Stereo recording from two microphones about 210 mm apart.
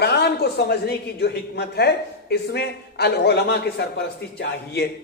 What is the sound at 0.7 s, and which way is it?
Speech, 50° left (ahead or behind).